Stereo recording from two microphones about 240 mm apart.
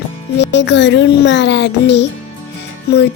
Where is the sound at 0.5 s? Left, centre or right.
Left.